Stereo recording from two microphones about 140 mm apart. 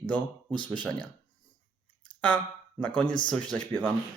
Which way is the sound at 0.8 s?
10° left (ahead or behind).